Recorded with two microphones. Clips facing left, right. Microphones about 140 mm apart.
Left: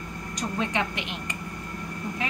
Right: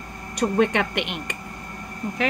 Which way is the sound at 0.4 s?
60° right (ahead or behind).